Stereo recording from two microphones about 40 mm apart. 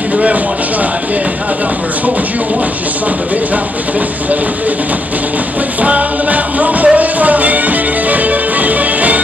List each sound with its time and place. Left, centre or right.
5.8 s music: right